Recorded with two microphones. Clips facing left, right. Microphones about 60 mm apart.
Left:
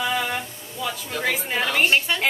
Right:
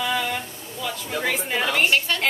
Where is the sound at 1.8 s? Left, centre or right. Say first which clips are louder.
Left 1 dB; centre.